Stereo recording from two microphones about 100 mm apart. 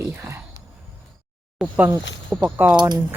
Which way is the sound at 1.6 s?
15° right (ahead or behind).